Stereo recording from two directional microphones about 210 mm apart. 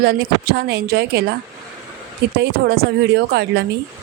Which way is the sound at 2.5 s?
45° right (ahead or behind).